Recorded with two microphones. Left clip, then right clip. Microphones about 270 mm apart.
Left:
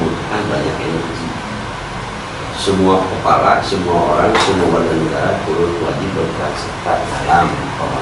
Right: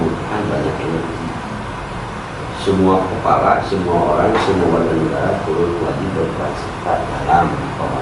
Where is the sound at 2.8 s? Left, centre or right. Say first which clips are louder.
Left 2 dB; right.